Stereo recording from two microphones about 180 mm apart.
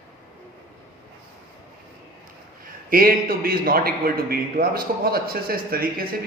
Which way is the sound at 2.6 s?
55° right (ahead or behind).